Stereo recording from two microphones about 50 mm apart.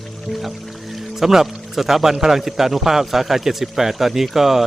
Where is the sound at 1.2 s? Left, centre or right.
Centre.